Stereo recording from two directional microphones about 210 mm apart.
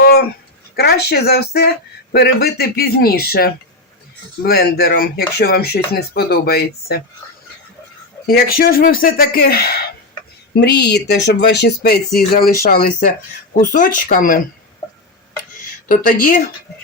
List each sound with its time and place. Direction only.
0.0 s a sound: 45° left (ahead or behind)
0.8 s speech: 50° left (ahead or behind)
8.3 s speech: 45° left (ahead or behind)
14.8 s tick-tock: 15° left (ahead or behind)
15.9 s speech: 40° left (ahead or behind)